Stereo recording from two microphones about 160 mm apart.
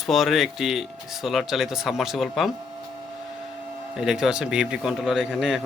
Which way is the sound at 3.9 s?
5° right (ahead or behind).